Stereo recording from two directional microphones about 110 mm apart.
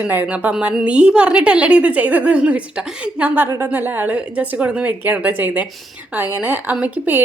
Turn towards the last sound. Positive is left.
turn(degrees=-15)  # may be behind; listen again after turning